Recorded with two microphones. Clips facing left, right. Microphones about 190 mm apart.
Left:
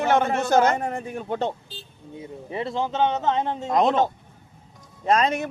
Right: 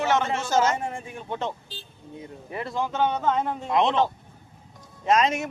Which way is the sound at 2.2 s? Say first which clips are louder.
Left 4 dB; 25° left (ahead or behind).